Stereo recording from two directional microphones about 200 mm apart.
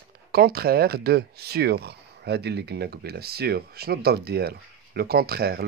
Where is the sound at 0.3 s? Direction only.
50° right (ahead or behind).